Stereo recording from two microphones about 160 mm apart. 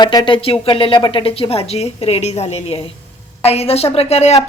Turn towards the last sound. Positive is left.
turn(degrees=40)  # may be behind; listen again after turning